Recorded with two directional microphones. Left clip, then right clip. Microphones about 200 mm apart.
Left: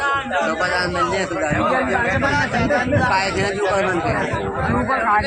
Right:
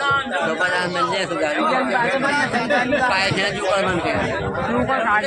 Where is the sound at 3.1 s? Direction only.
50° right (ahead or behind).